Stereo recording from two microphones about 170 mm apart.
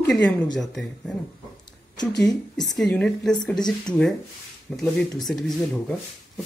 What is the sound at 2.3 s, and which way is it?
Speech, 20° left (ahead or behind).